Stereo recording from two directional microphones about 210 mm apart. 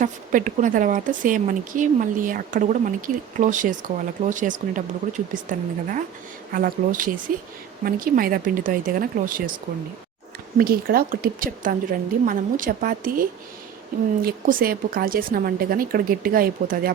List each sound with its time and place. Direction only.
0.0 s a woman's voice: 40° right (ahead or behind)
10.6 s a woman's voice: 45° right (ahead or behind)